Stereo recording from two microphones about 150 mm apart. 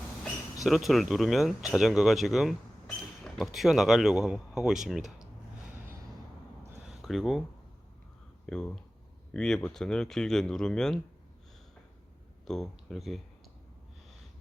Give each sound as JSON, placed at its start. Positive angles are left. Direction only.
{"t": 0.6, "sound": "speech", "side_deg": 0}
{"t": 6.8, "sound": "a sound", "side_deg": 0}
{"t": 8.4, "sound": "speech", "side_deg": 5}
{"t": 12.5, "sound": "speech", "side_deg": 0}